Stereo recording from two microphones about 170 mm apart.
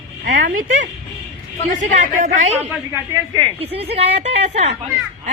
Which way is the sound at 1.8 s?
45° right (ahead or behind).